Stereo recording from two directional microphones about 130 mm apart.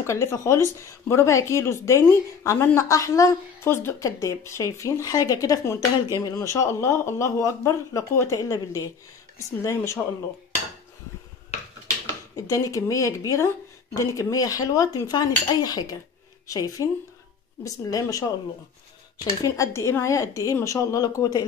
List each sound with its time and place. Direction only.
0.0 s speech: 20° left (ahead or behind)
12.4 s speech: 25° left (ahead or behind)
19.4 s speech: 25° left (ahead or behind)